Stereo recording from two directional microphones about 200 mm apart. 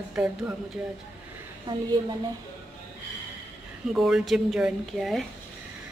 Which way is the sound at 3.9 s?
Centre (ahead or behind).